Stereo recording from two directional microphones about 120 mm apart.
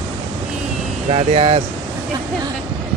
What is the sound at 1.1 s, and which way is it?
Speech, 55° right (ahead or behind).